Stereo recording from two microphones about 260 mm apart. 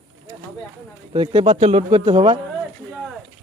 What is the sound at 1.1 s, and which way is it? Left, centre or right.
Speech, centre.